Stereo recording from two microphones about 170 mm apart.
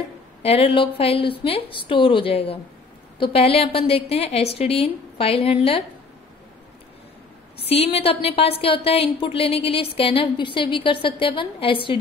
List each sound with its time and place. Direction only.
0.4 s a woman's voice: 35° left (ahead or behind)
7.6 s a woman's voice: 35° left (ahead or behind)